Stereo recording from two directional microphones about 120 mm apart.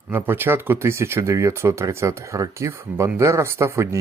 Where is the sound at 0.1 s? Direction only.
20° right (ahead or behind).